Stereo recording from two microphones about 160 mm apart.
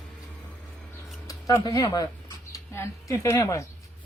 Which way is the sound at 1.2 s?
20° left (ahead or behind).